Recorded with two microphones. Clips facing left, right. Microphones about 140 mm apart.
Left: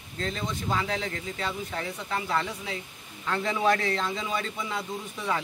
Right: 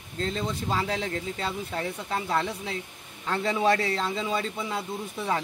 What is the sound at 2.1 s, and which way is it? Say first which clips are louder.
Speech: right 1 dB; 30° right (ahead or behind).